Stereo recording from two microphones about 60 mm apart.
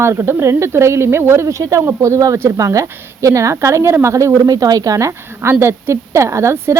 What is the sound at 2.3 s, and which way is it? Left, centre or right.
Speech, right.